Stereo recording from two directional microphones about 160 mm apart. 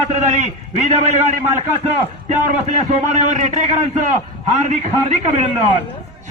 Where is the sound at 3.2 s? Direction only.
50° right (ahead or behind).